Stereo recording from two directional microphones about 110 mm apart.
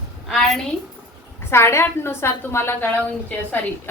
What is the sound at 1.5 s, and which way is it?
A woman's voice, 25° left (ahead or behind).